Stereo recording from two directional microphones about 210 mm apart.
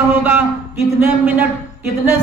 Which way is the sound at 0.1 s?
10° right (ahead or behind).